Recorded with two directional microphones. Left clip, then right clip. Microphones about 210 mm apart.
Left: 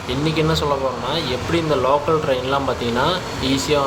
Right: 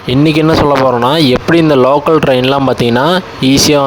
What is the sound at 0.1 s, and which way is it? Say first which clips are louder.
Speech: right 11 dB; 50° right (ahead or behind).